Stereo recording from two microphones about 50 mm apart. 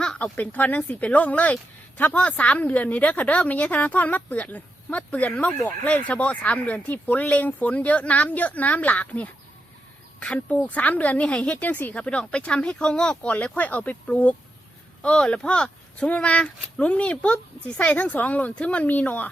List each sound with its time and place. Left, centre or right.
0.0 s a sound: centre
0.3 s speech: left
12.0 s speech: left
13.2 s speech: left